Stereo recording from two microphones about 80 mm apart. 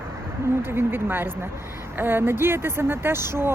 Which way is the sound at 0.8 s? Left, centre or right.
Right.